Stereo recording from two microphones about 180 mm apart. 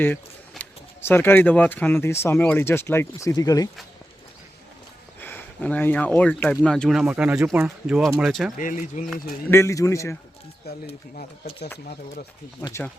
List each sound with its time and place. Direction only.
0.5 s speech: 10° left (ahead or behind)
5.2 s speech: 10° left (ahead or behind)
8.5 s speech: 45° left (ahead or behind)
9.5 s speech: 15° left (ahead or behind)
10.7 s speech: 60° left (ahead or behind)